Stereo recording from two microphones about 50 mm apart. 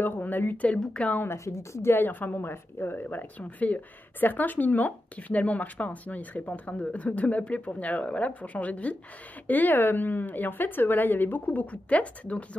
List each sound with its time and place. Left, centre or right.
0.0 s a woman's voice: left
0.7 s a woman's voice: left
1.3 s a woman's voice: left
1.9 s a woman's voice: left
9.5 s a woman's voice: left
11.6 s a woman's voice: left